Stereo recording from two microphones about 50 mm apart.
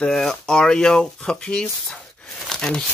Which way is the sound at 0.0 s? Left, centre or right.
Centre.